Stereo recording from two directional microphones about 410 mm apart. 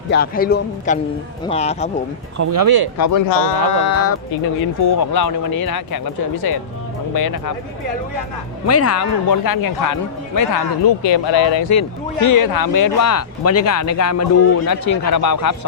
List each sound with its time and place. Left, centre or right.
0.1 s a man's voice: left
2.4 s speech: right
3.0 s a man's voice: left
4.8 s speech: left
8.6 s a man's voice: left
10.5 s speech: left
11.7 s speech: left
14.7 s speech: left